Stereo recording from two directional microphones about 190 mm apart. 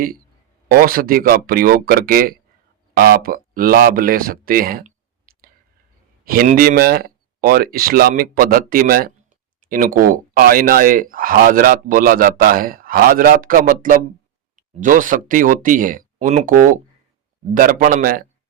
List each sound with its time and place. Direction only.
0.7 s speech: 50° right (ahead or behind)